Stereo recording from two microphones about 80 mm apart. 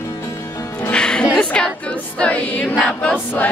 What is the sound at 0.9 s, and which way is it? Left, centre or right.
Music, centre.